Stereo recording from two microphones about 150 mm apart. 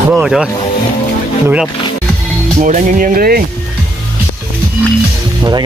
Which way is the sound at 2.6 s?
60° right (ahead or behind).